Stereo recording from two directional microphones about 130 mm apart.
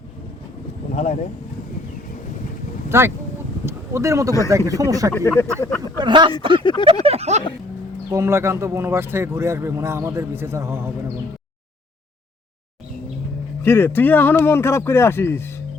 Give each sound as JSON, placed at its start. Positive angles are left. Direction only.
{"t": 0.9, "sound": "speech", "side_deg": 65}
{"t": 2.9, "sound": "speech", "side_deg": -20}
{"t": 5.1, "sound": "speech", "side_deg": 20}
{"t": 6.0, "sound": "speech", "side_deg": -35}
{"t": 7.0, "sound": "a sound", "side_deg": -50}
{"t": 8.1, "sound": "speech", "side_deg": -20}
{"t": 13.6, "sound": "speech", "side_deg": 20}